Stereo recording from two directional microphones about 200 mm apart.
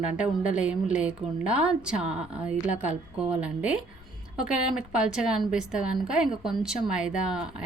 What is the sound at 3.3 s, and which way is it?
Speech, 5° right (ahead or behind).